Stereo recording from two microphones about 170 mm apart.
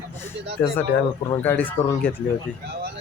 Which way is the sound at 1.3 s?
10° left (ahead or behind).